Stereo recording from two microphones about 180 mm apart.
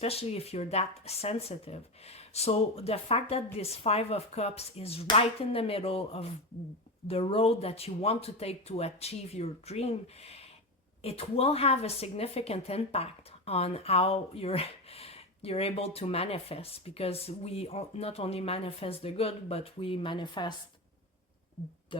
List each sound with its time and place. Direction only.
0.0 s speech: 35° left (ahead or behind)